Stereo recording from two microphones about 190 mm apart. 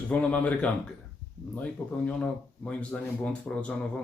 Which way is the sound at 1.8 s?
15° left (ahead or behind).